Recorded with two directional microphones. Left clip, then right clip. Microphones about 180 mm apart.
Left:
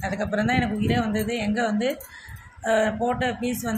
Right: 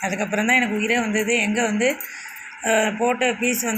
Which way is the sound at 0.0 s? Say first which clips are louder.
Right 3 dB; centre (ahead or behind).